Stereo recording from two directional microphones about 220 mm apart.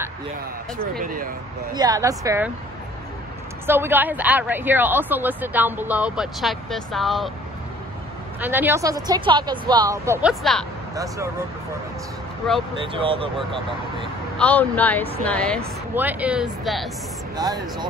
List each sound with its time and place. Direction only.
1.0 s speech: 40° right (ahead or behind)
1.7 s speech: 15° right (ahead or behind)
3.6 s speech: 10° right (ahead or behind)
8.4 s speech: 10° right (ahead or behind)
12.8 s speech: 25° right (ahead or behind)
14.4 s speech: 5° left (ahead or behind)
15.9 s speech: 10° right (ahead or behind)
17.4 s speech: 15° right (ahead or behind)